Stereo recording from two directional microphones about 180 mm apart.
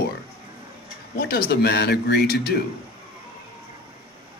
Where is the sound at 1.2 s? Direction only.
60° left (ahead or behind).